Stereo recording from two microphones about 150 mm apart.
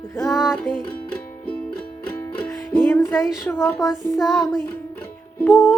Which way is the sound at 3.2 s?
Centre (ahead or behind).